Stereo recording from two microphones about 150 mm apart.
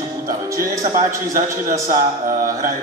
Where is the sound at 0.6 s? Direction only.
65° right (ahead or behind).